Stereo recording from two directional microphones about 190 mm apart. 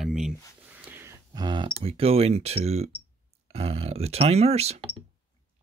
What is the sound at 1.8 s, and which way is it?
Speech, 30° right (ahead or behind).